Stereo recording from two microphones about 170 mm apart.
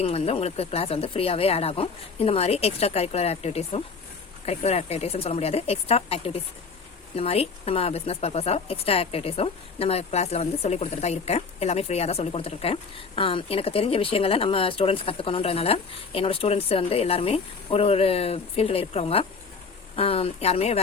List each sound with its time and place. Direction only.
0.0 s speech: 35° left (ahead or behind)